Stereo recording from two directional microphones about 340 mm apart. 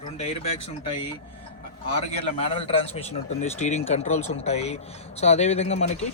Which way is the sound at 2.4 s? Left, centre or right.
Centre.